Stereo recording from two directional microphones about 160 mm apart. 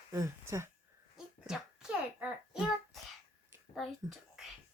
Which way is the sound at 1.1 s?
5° right (ahead or behind).